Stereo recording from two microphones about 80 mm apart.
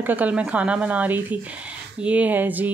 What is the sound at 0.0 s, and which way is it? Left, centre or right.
Speech, right.